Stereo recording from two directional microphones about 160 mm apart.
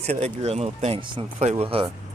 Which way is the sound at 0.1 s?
40° right (ahead or behind).